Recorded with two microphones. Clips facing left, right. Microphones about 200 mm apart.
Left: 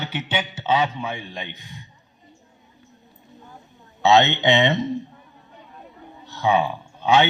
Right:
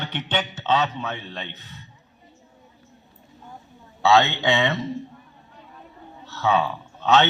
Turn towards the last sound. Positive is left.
turn(degrees=15)  # may be behind; listen again after turning